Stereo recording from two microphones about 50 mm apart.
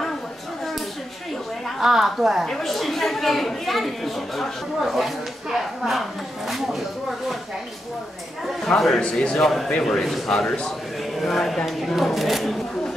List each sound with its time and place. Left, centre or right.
1.8 s speech: centre
8.6 s speech: centre